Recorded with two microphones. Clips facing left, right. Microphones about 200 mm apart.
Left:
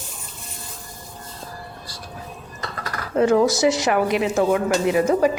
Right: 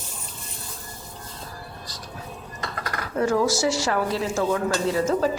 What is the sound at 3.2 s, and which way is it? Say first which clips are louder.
A woman's voice: left 5 dB; 20° left (ahead or behind).